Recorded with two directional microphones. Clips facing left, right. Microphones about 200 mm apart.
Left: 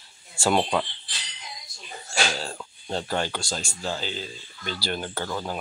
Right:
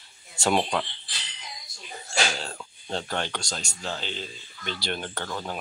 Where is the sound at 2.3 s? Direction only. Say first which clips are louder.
Left 2 dB; 5° left (ahead or behind).